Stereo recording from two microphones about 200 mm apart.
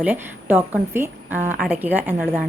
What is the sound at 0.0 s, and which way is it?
A woman's voice, 10° right (ahead or behind).